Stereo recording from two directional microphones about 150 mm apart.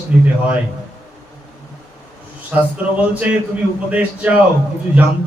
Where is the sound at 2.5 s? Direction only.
10° right (ahead or behind).